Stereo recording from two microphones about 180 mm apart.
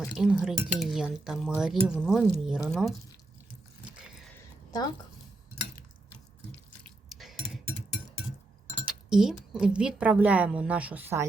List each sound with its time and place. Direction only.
0.1 s speech: 5° right (ahead or behind)
4.4 s a sound: 20° left (ahead or behind)
6.7 s drip: 5° left (ahead or behind)
8.8 s speech: 5° right (ahead or behind)